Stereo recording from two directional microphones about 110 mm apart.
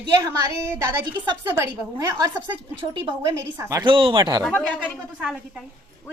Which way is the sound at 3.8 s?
50° right (ahead or behind).